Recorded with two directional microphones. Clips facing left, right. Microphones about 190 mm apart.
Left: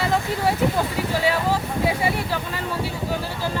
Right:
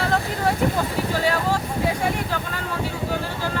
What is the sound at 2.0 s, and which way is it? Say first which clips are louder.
Speech: left 1 dB; 10° left (ahead or behind).